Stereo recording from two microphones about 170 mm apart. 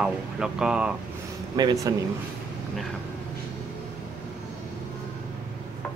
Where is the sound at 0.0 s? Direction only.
5° right (ahead or behind).